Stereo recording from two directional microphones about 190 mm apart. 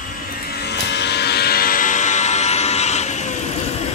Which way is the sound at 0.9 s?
65° left (ahead or behind).